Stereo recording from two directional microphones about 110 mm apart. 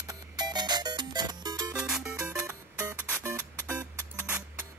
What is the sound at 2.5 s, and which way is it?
Music, 30° right (ahead or behind).